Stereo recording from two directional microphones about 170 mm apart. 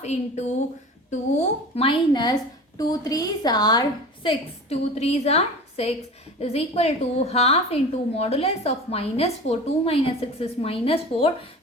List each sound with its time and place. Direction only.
0.0 s a woman's voice: 40° left (ahead or behind)